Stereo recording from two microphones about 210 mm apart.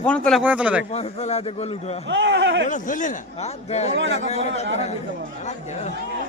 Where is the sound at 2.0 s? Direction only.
60° right (ahead or behind).